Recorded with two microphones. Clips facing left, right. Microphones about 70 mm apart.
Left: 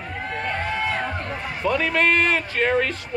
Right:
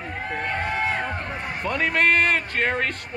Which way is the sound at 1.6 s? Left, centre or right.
Right.